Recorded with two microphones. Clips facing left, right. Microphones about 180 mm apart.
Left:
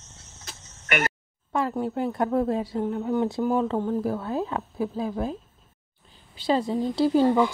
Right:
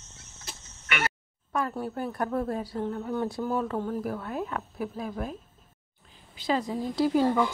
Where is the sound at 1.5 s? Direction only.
25° left (ahead or behind).